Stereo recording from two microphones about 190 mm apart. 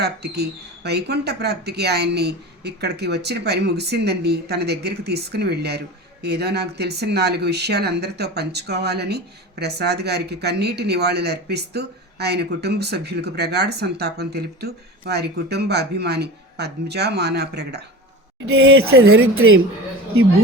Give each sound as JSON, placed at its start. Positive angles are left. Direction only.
{"t": 0.0, "sound": "a woman's voice", "side_deg": -60}